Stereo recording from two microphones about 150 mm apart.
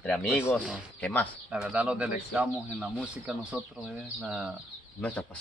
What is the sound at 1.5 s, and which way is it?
A man's voice, 10° right (ahead or behind).